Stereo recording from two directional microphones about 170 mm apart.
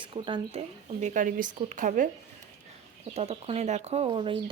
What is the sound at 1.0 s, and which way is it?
Speech, 50° right (ahead or behind).